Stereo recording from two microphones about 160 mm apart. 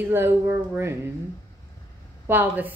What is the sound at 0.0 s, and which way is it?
A woman's voice, 15° right (ahead or behind).